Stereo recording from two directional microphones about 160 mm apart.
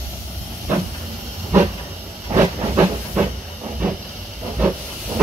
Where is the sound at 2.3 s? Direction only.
20° right (ahead or behind).